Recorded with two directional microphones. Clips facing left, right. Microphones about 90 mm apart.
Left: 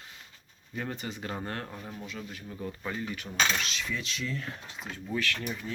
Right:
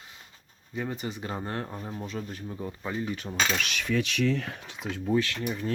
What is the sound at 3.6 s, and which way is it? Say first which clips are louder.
Speech: right 6 dB; 65° right (ahead or behind).